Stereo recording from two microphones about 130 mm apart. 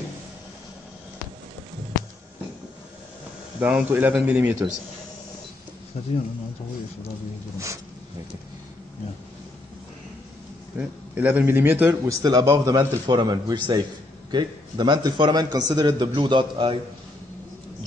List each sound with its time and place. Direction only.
3.5 s a man's voice: 10° right (ahead or behind)
5.9 s speech: 55° left (ahead or behind)
7.5 s a sound: 25° right (ahead or behind)
10.8 s a man's voice: 15° right (ahead or behind)
12.2 s a man's voice: 30° right (ahead or behind)